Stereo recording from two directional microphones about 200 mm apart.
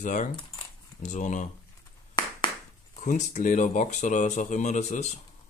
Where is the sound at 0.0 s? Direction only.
40° left (ahead or behind).